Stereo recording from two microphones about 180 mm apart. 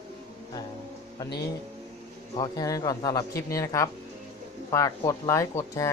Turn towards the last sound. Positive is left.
turn(degrees=15)  # may be behind; listen again after turning